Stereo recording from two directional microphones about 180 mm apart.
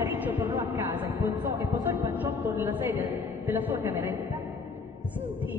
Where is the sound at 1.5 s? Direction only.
25° right (ahead or behind).